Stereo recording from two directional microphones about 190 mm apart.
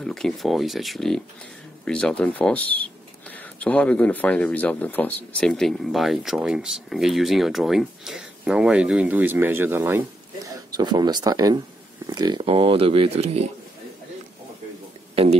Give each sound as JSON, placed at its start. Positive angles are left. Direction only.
{"t": 0.0, "sound": "speech", "side_deg": 0}